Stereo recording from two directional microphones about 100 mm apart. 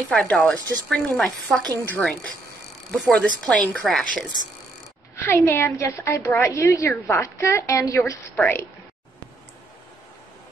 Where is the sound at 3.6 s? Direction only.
5° left (ahead or behind).